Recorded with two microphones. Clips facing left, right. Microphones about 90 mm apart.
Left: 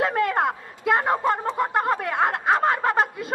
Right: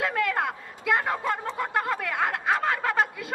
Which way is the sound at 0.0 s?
40° left (ahead or behind).